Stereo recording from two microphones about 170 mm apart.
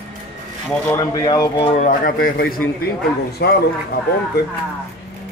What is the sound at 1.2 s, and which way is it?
Speech, 20° left (ahead or behind).